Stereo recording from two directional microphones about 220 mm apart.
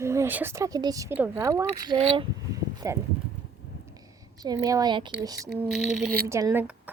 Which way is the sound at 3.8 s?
15° right (ahead or behind).